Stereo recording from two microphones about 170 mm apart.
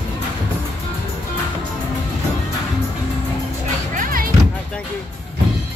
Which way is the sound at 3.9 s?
55° right (ahead or behind).